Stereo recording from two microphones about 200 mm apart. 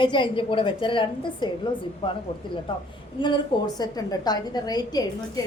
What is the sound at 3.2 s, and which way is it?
A woman's voice, 20° left (ahead or behind).